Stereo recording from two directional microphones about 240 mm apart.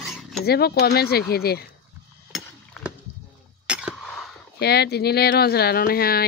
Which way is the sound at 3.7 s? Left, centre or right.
Centre.